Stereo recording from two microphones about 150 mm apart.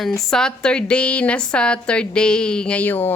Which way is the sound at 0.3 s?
5° left (ahead or behind).